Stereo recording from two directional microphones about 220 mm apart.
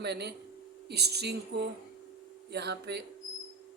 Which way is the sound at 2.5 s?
50° right (ahead or behind).